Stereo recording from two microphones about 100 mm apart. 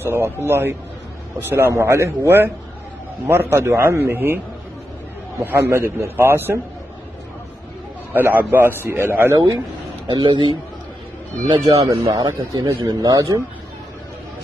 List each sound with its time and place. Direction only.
0.0 s a man's voice: 25° right (ahead or behind)
5.6 s a man's voice: 30° right (ahead or behind)
8.1 s a man's voice: 20° right (ahead or behind)
10.0 s a man's voice: 50° right (ahead or behind)
11.9 s speech: 70° right (ahead or behind)
12.2 s a man's voice: 45° right (ahead or behind)